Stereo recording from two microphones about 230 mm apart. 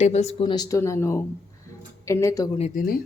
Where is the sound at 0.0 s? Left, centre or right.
Left; by 2.5 s centre.